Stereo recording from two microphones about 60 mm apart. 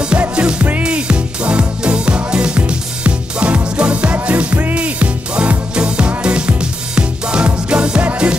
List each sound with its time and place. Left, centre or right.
0.2 s music: centre